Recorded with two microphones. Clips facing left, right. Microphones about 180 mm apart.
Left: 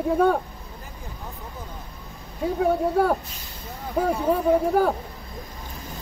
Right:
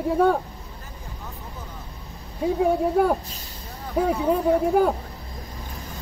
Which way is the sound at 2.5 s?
5° right (ahead or behind).